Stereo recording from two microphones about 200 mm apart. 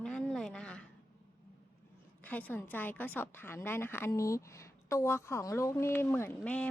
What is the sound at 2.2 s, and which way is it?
A woman's voice, 10° left (ahead or behind).